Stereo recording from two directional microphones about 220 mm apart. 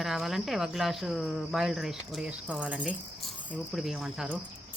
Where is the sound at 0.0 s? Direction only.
Centre (ahead or behind).